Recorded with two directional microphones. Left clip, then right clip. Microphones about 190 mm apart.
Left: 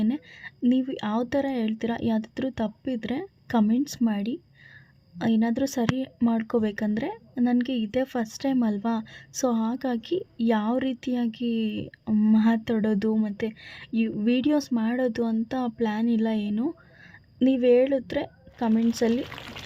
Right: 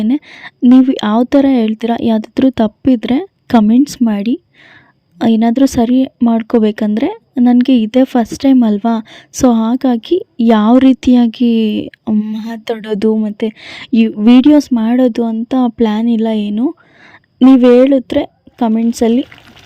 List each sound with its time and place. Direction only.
0.0 s speech: 40° right (ahead or behind)